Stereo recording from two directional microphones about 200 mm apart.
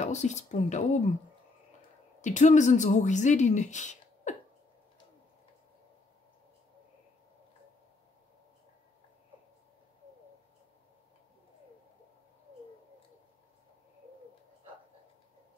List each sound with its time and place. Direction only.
0.0 s speech: 35° left (ahead or behind)
2.2 s speech: 35° left (ahead or behind)